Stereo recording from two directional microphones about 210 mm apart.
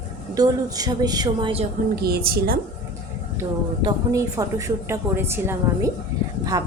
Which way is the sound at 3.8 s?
15° right (ahead or behind).